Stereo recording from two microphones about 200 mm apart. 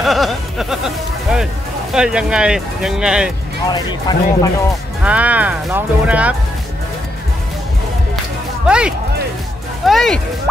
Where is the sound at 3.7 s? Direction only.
20° left (ahead or behind).